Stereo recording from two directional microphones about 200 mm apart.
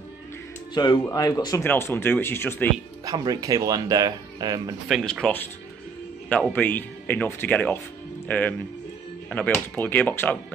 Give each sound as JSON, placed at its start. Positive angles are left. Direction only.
{"t": 1.0, "sound": "speech", "side_deg": 20}
{"t": 3.1, "sound": "speech", "side_deg": -15}
{"t": 4.8, "sound": "speech", "side_deg": 0}